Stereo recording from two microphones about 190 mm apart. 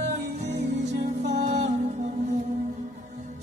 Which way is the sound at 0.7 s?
65° right (ahead or behind).